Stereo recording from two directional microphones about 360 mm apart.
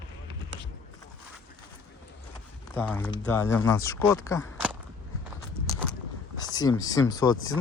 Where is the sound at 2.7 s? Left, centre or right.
Centre.